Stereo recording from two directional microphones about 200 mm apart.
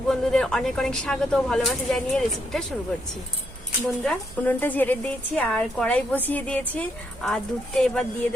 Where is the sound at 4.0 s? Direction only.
5° left (ahead or behind).